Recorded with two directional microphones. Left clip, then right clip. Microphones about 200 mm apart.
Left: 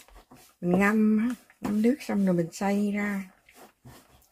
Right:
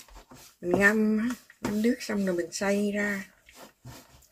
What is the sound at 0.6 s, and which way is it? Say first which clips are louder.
Speech: right 2 dB; 35° left (ahead or behind).